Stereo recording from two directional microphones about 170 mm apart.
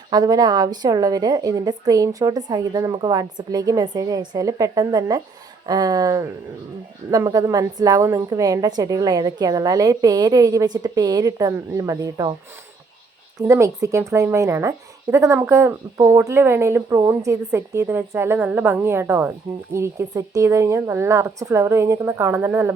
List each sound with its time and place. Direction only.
0.1 s a woman's voice: 20° right (ahead or behind)
13.4 s speech: 15° right (ahead or behind)